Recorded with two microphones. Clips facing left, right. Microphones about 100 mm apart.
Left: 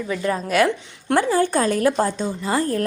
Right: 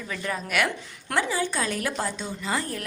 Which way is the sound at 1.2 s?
50° left (ahead or behind).